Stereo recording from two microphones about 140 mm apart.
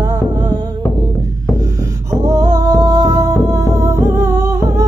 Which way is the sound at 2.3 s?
25° right (ahead or behind).